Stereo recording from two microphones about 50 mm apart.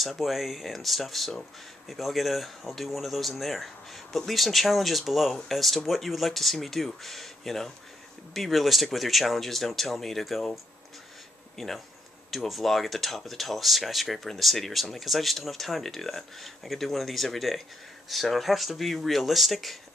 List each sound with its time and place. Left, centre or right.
0.0 s speech: centre
11.5 s speech: centre